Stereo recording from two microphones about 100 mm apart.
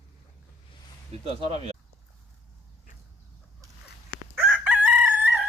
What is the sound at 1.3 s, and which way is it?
Speech, 85° right.